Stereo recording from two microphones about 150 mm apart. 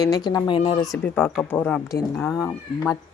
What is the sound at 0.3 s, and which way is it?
Speech, 30° left (ahead or behind).